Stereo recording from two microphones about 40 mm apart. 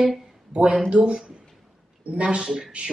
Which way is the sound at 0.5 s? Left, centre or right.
Right.